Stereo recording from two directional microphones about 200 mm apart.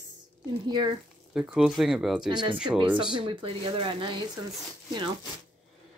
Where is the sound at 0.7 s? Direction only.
20° right (ahead or behind).